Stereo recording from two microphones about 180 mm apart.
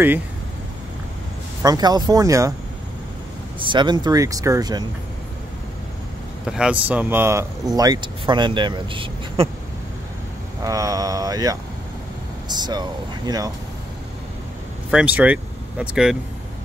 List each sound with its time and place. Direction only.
1.6 s speech: 20° right (ahead or behind)
3.5 s speech: 25° right (ahead or behind)
6.4 s speech: 5° right (ahead or behind); by 9.5 s 30° right (ahead or behind)
10.6 s speech: 20° right (ahead or behind)
14.9 s speech: 5° right (ahead or behind)